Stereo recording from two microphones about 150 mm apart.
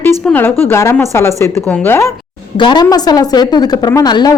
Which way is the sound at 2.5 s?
30° left (ahead or behind).